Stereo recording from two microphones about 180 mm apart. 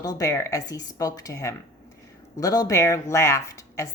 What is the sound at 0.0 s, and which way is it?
Speech, 20° left (ahead or behind).